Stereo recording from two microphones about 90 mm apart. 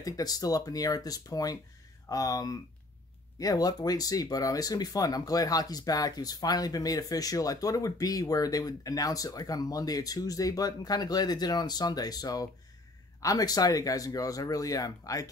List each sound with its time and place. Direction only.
0.0 s speech: 45° left (ahead or behind)